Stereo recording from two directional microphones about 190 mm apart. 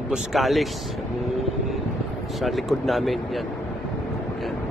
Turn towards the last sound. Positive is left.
turn(degrees=0)  # may be behind; listen again after turning